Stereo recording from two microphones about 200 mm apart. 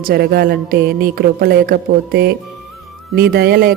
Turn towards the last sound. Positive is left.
turn(degrees=-50)  # may be behind; listen again after turning